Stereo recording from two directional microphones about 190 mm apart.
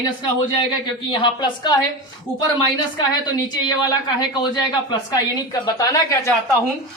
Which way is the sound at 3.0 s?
20° left (ahead or behind).